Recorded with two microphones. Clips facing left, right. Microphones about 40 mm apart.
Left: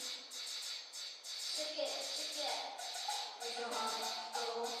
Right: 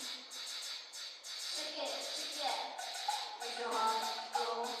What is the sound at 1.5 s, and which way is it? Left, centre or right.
Music, centre.